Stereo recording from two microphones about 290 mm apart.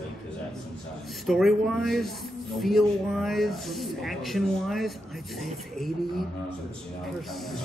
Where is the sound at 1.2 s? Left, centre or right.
Centre.